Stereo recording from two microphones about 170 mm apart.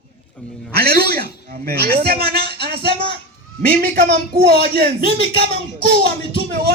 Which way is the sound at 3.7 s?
60° right (ahead or behind).